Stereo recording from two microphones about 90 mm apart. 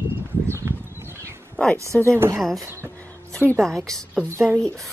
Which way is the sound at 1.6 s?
15° left (ahead or behind).